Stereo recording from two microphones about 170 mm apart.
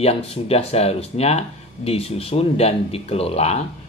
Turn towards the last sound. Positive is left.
turn(degrees=35)  # may be behind; listen again after turning